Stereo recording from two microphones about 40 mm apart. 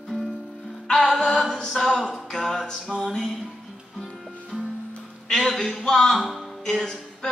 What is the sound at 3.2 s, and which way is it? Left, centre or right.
Music, centre.